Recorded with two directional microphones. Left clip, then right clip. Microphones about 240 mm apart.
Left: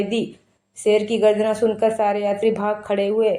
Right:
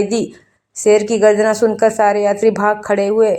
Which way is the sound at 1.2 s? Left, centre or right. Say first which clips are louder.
Right 5 dB; right.